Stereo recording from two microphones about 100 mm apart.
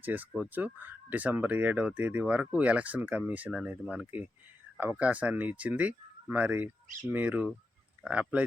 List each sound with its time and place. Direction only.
0.0 s speech: 20° right (ahead or behind)